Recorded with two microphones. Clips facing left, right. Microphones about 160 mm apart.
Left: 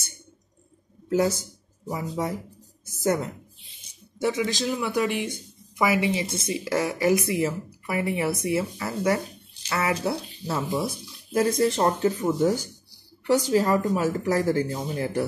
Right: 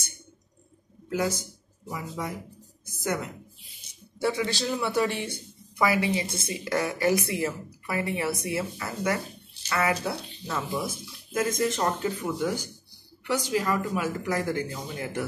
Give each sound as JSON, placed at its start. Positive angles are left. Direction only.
{"t": 1.0, "sound": "a sound", "side_deg": 40}
{"t": 1.9, "sound": "a woman's voice", "side_deg": 35}
{"t": 4.4, "sound": "speech", "side_deg": 10}
{"t": 10.7, "sound": "speech", "side_deg": 20}
{"t": 11.3, "sound": "speech", "side_deg": 35}